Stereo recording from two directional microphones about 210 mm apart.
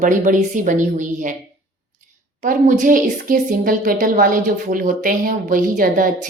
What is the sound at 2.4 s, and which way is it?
Speech, 40° right (ahead or behind).